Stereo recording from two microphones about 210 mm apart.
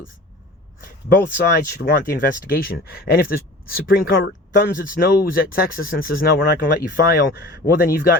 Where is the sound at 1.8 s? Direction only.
45° left (ahead or behind).